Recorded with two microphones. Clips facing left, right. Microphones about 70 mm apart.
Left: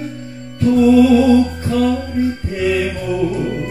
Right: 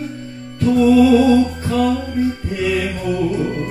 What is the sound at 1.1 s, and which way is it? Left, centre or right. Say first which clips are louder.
Music: left 1 dB; right.